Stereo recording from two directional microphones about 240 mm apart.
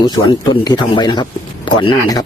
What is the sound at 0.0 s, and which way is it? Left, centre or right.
A man's voice, centre.